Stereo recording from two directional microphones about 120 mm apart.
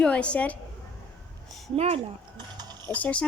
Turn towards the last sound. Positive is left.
turn(degrees=10)  # may be behind; listen again after turning